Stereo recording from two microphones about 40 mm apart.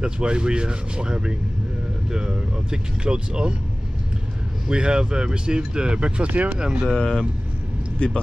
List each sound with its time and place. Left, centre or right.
0.0 s speech: right
4.6 s speech: right
6.9 s speech: centre
8.0 s speech: left